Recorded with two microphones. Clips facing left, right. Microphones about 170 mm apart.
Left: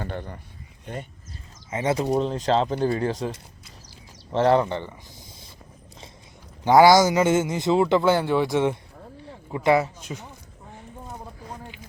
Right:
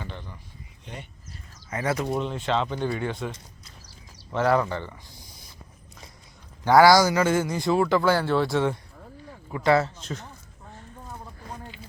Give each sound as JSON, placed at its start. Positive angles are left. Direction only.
{"t": 0.0, "sound": "speech", "side_deg": 50}
{"t": 1.7, "sound": "a man's voice", "side_deg": 25}
{"t": 2.0, "sound": "speech", "side_deg": 35}
{"t": 6.7, "sound": "a man's voice", "side_deg": 20}
{"t": 11.3, "sound": "a sound", "side_deg": 15}